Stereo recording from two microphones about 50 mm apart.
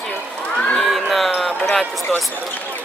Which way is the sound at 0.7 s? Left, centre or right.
Centre.